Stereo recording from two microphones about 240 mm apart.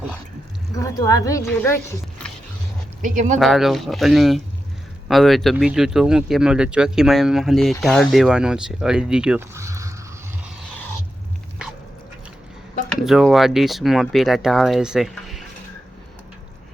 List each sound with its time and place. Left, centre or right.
0.8 s speech: centre
3.0 s speech: right
3.3 s speech: centre
10.4 s a sound: centre
12.9 s speech: centre